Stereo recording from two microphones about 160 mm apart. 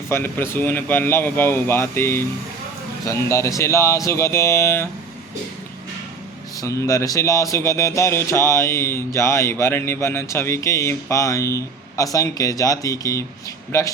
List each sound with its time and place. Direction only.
0.1 s speech: 15° left (ahead or behind)
6.6 s speech: 20° left (ahead or behind)